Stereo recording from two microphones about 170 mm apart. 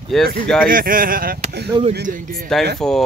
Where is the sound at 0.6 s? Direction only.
55° right (ahead or behind).